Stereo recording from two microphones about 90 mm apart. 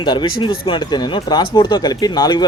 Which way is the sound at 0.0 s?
60° left (ahead or behind).